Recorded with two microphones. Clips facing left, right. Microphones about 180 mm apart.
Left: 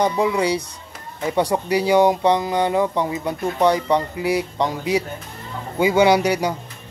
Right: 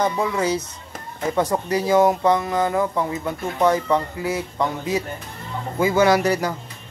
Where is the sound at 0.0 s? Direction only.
15° left (ahead or behind).